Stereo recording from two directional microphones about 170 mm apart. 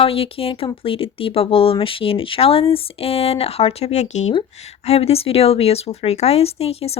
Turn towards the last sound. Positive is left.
turn(degrees=35)  # may be behind; listen again after turning